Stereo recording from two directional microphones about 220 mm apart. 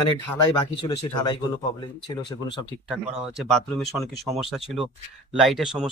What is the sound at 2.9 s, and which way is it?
Speech, centre (ahead or behind).